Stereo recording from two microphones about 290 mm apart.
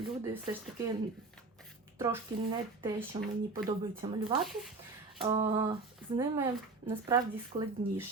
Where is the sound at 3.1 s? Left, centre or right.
Centre.